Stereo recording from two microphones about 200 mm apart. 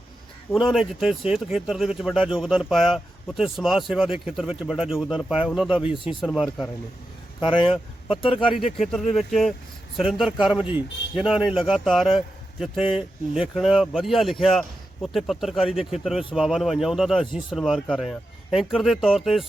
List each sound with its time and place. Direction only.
0.5 s speech: centre (ahead or behind)
5.7 s speech: 25° left (ahead or behind)
6.2 s speech: centre (ahead or behind)
7.4 s speech: 25° left (ahead or behind)
8.5 s speech: centre (ahead or behind)